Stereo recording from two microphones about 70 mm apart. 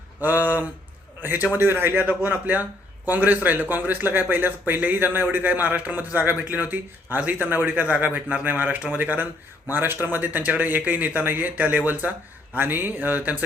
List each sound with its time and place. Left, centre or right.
0.2 s speech: right